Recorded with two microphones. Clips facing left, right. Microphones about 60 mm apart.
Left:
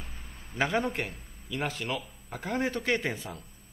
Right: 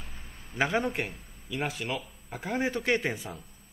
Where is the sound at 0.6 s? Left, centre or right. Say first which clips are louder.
Right 1 dB; centre.